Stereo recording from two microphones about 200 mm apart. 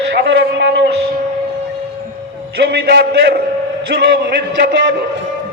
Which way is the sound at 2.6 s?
55° right (ahead or behind).